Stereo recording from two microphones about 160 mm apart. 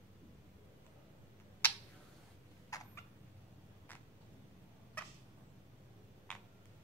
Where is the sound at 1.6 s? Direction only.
10° left (ahead or behind).